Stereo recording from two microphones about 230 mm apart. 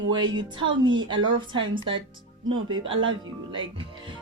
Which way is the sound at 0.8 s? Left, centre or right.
Centre.